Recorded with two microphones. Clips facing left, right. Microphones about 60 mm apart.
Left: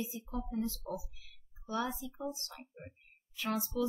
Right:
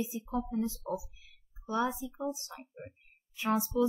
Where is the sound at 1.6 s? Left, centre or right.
Right.